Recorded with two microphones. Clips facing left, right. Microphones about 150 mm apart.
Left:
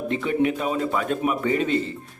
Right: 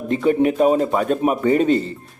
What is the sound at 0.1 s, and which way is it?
A man's voice, 40° right (ahead or behind).